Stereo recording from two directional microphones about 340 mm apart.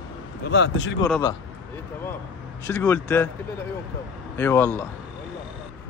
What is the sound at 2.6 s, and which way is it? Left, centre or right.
Speech, centre.